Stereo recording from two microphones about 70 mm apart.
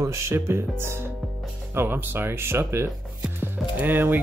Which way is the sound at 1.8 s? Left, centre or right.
Right.